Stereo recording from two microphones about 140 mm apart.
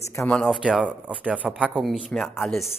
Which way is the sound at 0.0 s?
20° left (ahead or behind).